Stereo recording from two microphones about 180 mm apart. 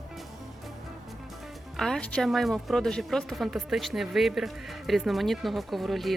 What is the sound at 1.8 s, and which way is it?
A woman's voice, 5° left (ahead or behind).